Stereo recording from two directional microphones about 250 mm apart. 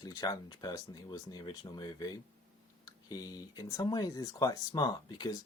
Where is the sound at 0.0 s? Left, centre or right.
Centre.